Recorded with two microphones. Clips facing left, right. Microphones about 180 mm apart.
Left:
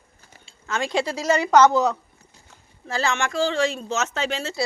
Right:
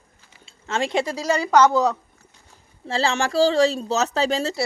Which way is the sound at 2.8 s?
30° right (ahead or behind).